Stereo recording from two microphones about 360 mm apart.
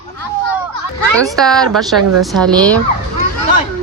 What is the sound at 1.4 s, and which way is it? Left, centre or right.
Speech, centre.